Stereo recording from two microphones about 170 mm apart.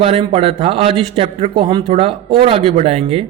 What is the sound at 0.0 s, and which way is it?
A man's voice, 35° right (ahead or behind).